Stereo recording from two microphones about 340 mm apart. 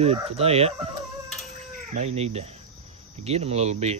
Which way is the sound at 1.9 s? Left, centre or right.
Centre.